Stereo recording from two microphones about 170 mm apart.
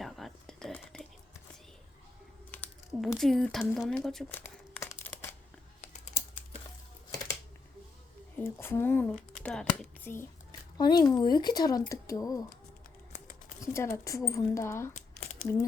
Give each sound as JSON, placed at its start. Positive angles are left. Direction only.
{"t": 0.0, "sound": "a sound", "side_deg": 0}
{"t": 2.5, "sound": "speech", "side_deg": 10}
{"t": 4.4, "sound": "crumpling", "side_deg": 15}
{"t": 8.4, "sound": "speech", "side_deg": 15}
{"t": 10.8, "sound": "speech", "side_deg": 25}
{"t": 13.6, "sound": "speech", "side_deg": 15}